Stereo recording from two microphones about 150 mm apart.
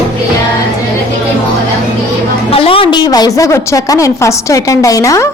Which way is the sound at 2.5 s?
40° left (ahead or behind).